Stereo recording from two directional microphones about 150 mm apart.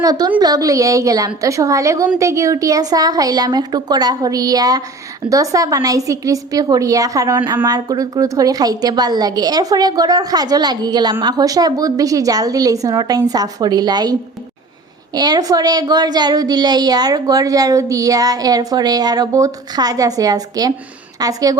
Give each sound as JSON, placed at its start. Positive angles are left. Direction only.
{"t": 0.0, "sound": "a woman's voice", "side_deg": -25}